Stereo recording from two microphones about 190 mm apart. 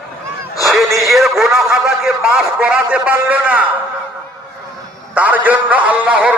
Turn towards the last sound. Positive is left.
turn(degrees=-10)  # may be behind; listen again after turning